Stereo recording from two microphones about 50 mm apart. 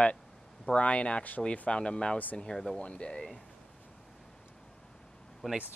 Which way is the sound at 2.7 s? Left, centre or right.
Left.